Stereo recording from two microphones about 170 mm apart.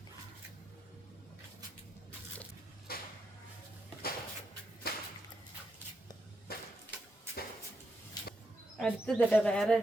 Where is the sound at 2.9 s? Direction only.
65° left (ahead or behind).